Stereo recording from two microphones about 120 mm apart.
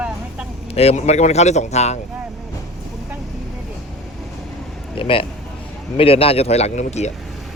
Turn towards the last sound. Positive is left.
turn(degrees=70)  # may be behind; listen again after turning